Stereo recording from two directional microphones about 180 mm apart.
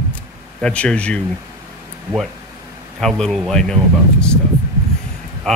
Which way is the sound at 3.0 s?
5° left (ahead or behind).